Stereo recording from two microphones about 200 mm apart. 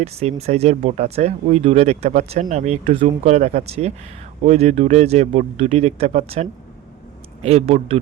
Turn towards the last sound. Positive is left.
turn(degrees=-30)  # may be behind; listen again after turning